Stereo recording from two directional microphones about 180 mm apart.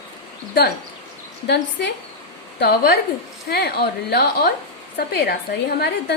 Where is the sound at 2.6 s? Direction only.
60° left (ahead or behind).